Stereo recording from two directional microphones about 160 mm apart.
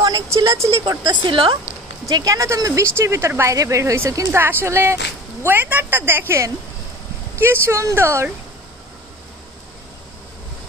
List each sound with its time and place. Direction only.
0.0 s a sound: 25° right (ahead or behind)
0.8 s a woman's voice: 25° right (ahead or behind)
2.0 s speech: 20° right (ahead or behind)